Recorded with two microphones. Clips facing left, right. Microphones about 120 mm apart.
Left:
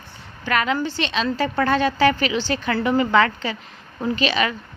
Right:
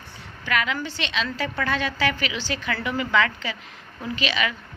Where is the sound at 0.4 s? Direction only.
40° left (ahead or behind).